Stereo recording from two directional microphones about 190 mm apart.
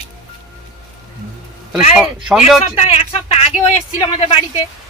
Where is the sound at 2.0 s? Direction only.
5° right (ahead or behind).